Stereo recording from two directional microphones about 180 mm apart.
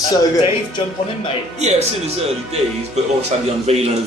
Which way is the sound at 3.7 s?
35° right (ahead or behind).